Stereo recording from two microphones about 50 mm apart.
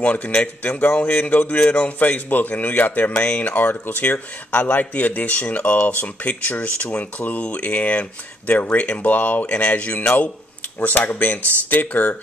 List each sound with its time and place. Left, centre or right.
0.0 s speech: left